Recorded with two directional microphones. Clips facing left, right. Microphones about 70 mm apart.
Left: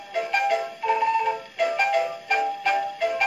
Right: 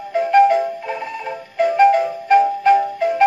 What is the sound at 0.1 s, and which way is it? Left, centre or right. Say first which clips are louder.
Music: right 10 dB; right.